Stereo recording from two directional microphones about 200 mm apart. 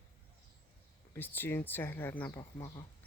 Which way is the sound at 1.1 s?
10° left (ahead or behind).